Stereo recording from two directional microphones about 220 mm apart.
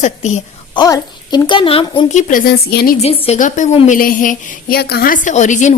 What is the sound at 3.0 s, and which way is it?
Speech, 30° left (ahead or behind).